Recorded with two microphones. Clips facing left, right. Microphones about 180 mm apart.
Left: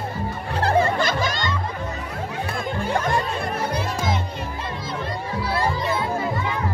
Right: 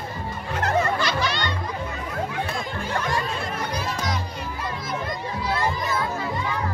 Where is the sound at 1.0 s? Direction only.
50° left (ahead or behind).